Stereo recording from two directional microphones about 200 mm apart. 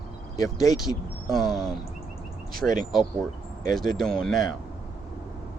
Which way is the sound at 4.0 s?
Centre (ahead or behind).